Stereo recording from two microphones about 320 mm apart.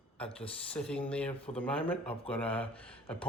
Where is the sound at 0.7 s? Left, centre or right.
Centre.